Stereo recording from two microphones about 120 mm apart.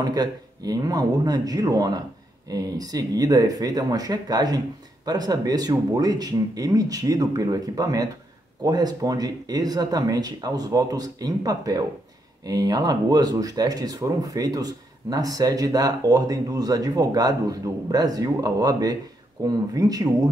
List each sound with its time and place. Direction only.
0.0 s speech: 35° right (ahead or behind)